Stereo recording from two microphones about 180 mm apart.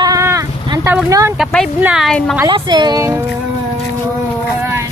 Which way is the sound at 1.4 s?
Centre (ahead or behind).